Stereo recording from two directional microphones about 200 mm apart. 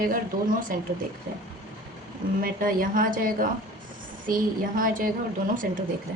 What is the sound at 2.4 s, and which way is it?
A woman's voice, 45° right (ahead or behind).